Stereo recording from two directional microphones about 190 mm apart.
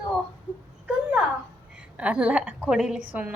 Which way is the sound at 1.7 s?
5° right (ahead or behind).